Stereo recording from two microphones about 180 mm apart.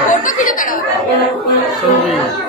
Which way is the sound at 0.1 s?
50° left (ahead or behind).